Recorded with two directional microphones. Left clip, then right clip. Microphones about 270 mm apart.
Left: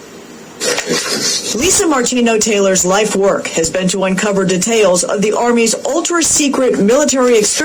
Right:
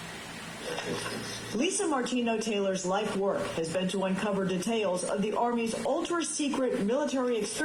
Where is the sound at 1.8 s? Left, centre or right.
Left.